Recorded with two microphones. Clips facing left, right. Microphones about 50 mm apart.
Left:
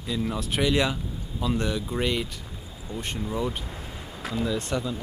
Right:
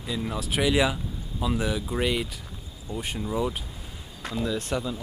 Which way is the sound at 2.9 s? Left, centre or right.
Left.